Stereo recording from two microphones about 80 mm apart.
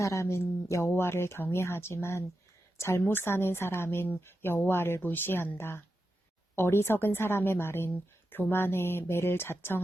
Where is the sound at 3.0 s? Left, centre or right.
Left.